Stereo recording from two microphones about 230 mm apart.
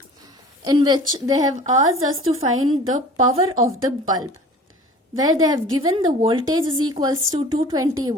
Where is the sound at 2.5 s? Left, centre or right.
Right.